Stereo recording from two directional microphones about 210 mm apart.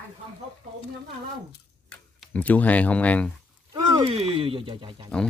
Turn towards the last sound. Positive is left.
turn(degrees=-25)  # may be behind; listen again after turning